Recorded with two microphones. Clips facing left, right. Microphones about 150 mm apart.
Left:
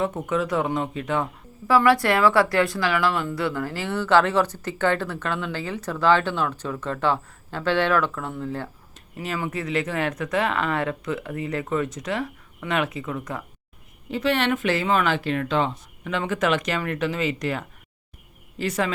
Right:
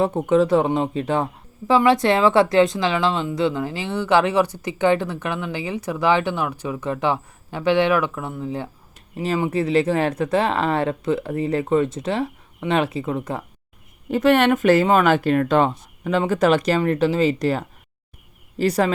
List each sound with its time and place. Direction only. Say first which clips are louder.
0.0 s speech: right 7 dB; 30° right (ahead or behind)
9.1 s speech: right 7 dB; 30° right (ahead or behind)
14.1 s speech: right 7 dB; 50° right (ahead or behind)
16.0 s speech: right 6 dB; 35° right (ahead or behind)